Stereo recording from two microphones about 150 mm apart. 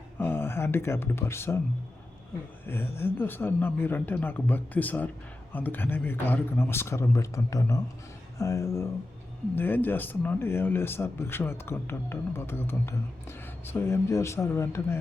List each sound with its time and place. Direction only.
0.2 s speech: 15° left (ahead or behind)
2.6 s speech: 15° left (ahead or behind)